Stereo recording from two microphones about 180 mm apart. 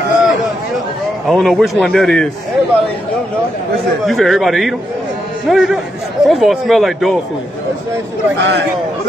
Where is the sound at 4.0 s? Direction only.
Centre (ahead or behind).